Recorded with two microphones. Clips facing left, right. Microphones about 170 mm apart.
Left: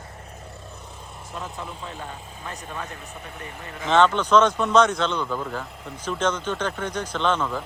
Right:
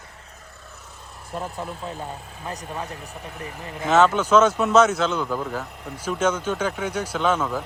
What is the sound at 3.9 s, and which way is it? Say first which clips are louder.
Speech: right 1 dB; 5° right (ahead or behind).